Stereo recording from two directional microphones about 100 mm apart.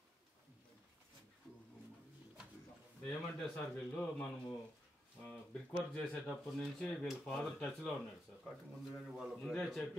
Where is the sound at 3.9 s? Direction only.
15° left (ahead or behind).